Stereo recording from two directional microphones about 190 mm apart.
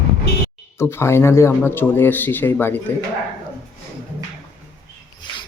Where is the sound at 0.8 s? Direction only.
15° left (ahead or behind).